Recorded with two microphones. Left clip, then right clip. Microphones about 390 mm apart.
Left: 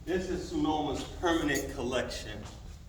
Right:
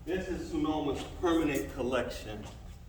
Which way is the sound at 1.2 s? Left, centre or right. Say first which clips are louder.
Even; centre.